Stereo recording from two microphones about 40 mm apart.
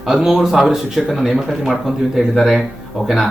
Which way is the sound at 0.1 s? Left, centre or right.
Centre.